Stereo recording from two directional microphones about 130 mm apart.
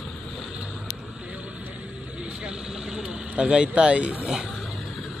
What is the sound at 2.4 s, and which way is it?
Vehicle, 5° right (ahead or behind).